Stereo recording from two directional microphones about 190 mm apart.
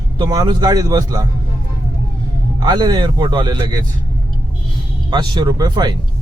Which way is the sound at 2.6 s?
20° right (ahead or behind).